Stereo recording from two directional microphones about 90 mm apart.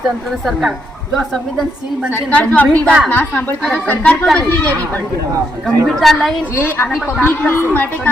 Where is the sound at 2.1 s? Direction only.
15° left (ahead or behind).